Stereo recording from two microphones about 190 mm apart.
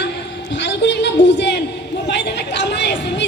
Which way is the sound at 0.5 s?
65° left (ahead or behind).